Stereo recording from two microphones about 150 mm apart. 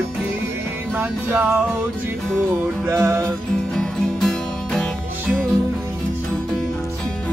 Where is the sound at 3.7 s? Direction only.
5° left (ahead or behind).